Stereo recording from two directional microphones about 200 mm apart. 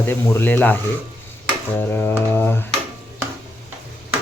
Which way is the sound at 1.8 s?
10° left (ahead or behind).